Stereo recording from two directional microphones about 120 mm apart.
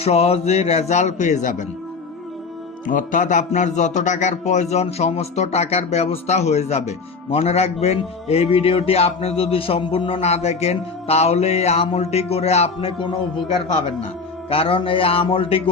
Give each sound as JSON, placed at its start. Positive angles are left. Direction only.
{"t": 0.0, "sound": "speech", "side_deg": 60}
{"t": 2.8, "sound": "a man's voice", "side_deg": 90}
{"t": 14.5, "sound": "a man's voice", "side_deg": 50}